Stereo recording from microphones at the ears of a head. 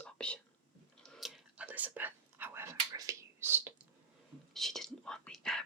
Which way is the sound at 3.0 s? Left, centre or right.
Right.